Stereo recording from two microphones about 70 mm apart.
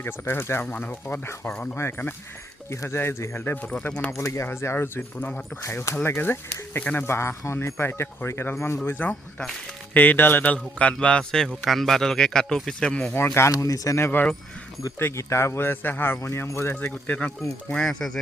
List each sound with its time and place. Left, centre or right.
0.0 s speech: left
0.6 s speech: left
3.6 s speech: centre
4.2 s speech: left
8.8 s speech: left; by 13.1 s centre
13.1 s speech: left
13.5 s speech: left
14.0 s speech: left
16.2 s speech: left
17.1 s speech: left
17.7 s speech: centre